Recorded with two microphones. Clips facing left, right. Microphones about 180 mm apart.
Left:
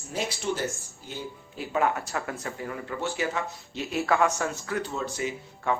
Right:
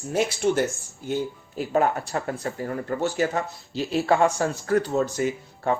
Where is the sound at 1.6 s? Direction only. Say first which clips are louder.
Right 4 dB; 40° right (ahead or behind).